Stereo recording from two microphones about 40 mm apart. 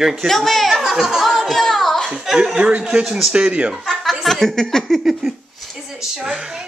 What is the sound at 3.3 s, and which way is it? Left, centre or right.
Speech, right.